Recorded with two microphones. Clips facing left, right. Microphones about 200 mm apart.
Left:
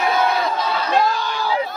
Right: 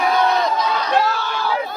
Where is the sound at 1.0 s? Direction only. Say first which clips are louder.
Even; 15° left (ahead or behind).